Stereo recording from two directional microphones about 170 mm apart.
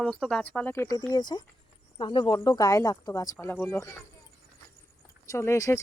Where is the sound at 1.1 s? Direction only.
25° left (ahead or behind).